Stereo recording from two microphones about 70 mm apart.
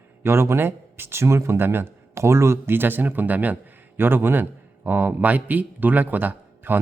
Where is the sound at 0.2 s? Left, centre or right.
Right.